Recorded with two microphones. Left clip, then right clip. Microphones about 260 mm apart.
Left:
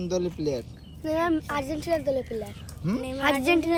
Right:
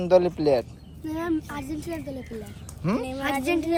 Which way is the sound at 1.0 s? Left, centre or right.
Centre.